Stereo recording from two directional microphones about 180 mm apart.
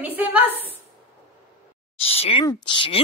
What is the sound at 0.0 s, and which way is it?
Speech, 10° right (ahead or behind).